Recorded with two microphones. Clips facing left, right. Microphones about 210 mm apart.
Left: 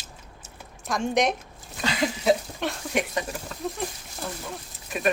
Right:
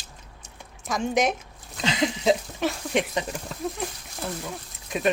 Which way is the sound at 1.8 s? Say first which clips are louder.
Even; 20° right (ahead or behind).